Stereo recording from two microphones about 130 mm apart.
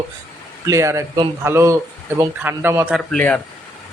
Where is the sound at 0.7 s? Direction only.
20° right (ahead or behind).